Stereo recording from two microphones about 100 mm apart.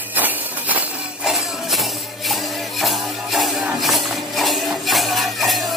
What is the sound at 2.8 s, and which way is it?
Music, centre (ahead or behind).